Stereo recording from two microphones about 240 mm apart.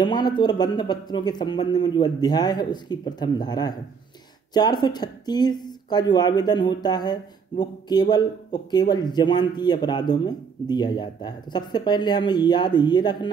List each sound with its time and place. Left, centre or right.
0.0 s speech: centre